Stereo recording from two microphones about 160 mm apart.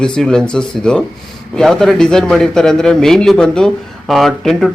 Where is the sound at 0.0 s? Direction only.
5° left (ahead or behind).